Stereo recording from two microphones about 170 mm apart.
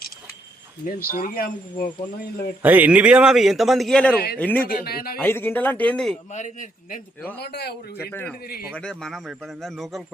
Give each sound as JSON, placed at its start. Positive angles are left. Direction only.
{"t": 0.9, "sound": "speech", "side_deg": 55}
{"t": 2.6, "sound": "a man's voice", "side_deg": -10}
{"t": 4.7, "sound": "speech", "side_deg": 60}
{"t": 5.2, "sound": "speech", "side_deg": 15}
{"t": 6.3, "sound": "a man's voice", "side_deg": 45}
{"t": 7.3, "sound": "a man's voice", "side_deg": 75}
{"t": 8.1, "sound": "a man's voice", "side_deg": 10}